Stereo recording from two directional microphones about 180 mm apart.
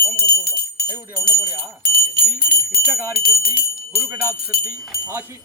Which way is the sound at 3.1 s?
55° left (ahead or behind).